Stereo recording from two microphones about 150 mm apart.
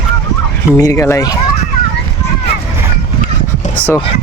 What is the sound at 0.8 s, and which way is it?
Speech, 20° left (ahead or behind).